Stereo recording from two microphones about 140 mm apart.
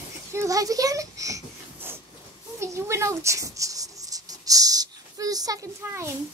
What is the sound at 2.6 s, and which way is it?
Writing, 20° right (ahead or behind).